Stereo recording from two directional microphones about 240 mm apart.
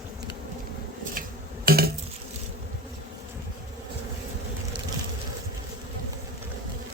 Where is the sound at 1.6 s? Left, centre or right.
Right.